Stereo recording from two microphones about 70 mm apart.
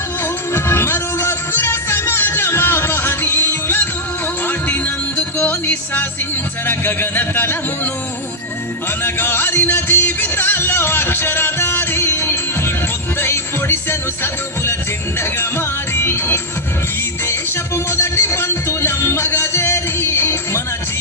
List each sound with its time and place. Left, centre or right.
0.5 s music: left
6.7 s speech: left
9.0 s music: left
15.2 s music: left
17.9 s music: left